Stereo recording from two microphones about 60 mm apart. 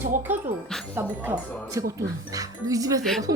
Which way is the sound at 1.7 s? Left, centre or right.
Right.